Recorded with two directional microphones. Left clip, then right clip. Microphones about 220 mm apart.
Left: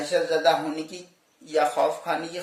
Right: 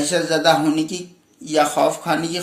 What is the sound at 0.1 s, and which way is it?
Speech, 5° right (ahead or behind).